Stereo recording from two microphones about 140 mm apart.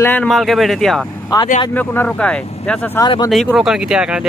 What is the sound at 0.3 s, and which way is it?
Speech, centre (ahead or behind).